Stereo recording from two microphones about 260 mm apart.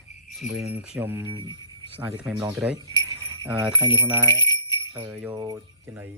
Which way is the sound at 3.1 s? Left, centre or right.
Centre.